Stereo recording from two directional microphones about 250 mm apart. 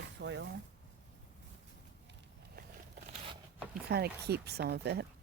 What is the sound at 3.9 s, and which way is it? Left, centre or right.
Speech, right.